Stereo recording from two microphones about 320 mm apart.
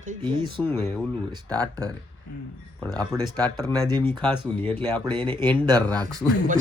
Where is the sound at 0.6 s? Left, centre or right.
Centre.